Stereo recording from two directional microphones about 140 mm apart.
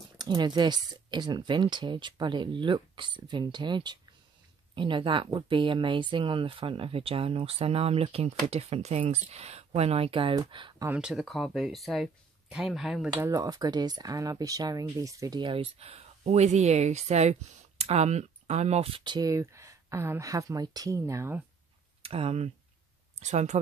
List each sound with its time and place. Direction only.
0.2 s speech: 30° right (ahead or behind)
10.9 s speech: 5° right (ahead or behind)
13.2 s speech: 25° right (ahead or behind)
22.0 s speech: 45° right (ahead or behind)